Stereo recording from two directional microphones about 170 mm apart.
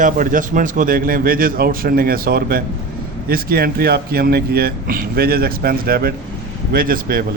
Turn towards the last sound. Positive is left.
turn(degrees=-60)  # may be behind; listen again after turning